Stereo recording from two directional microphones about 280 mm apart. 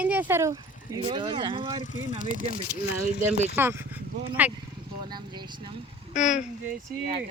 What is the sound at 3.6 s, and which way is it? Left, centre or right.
Speech, centre.